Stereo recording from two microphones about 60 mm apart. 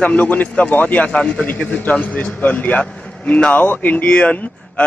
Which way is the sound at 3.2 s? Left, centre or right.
Left.